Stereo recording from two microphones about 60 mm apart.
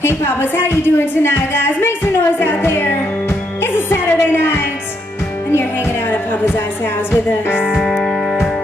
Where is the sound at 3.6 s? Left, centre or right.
Left.